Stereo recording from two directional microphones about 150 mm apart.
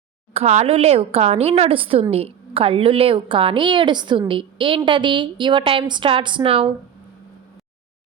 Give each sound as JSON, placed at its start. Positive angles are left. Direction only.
{"t": 0.3, "sound": "a woman's voice", "side_deg": -45}